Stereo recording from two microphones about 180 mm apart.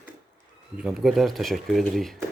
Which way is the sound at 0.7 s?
Centre (ahead or behind).